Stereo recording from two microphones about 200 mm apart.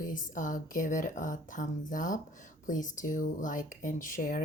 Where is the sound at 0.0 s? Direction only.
40° left (ahead or behind).